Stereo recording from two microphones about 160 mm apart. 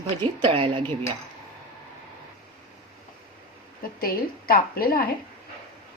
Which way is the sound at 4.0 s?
65° left (ahead or behind).